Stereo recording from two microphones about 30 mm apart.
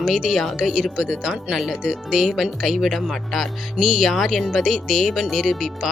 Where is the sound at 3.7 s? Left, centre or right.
Centre.